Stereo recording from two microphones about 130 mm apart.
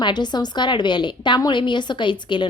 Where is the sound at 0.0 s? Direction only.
35° left (ahead or behind).